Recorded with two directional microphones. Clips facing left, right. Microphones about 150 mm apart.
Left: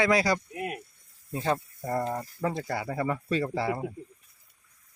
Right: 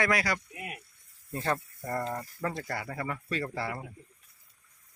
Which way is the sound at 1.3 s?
15° left (ahead or behind).